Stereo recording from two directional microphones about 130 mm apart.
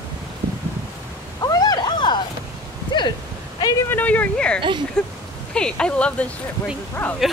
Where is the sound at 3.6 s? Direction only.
30° left (ahead or behind).